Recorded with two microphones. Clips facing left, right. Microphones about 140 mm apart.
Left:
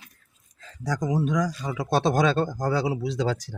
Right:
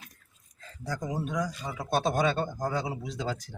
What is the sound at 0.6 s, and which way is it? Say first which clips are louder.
Speech: left 6 dB; 90° left.